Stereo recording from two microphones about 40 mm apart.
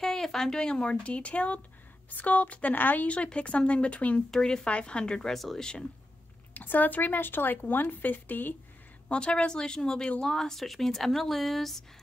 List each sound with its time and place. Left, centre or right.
0.0 s speech: centre; by 1.6 s left
2.0 s speech: left
2.7 s speech: left
3.3 s speech: left
4.3 s speech: centre
4.6 s speech: left
5.3 s speech: centre
5.6 s speech: centre
6.5 s speech: left
9.1 s speech: left; by 11.8 s centre